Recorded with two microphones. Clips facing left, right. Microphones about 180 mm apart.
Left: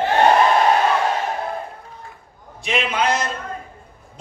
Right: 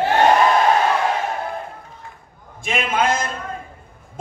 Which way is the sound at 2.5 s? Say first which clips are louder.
Right 1 dB; 50° right (ahead or behind).